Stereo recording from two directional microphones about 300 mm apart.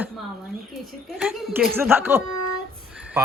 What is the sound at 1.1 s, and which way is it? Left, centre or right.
Speech, centre.